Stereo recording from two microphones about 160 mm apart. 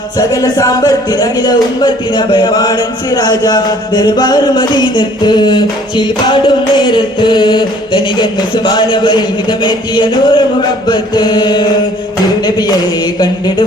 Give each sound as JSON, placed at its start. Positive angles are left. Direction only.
{"t": 0.2, "sound": "speech", "side_deg": 20}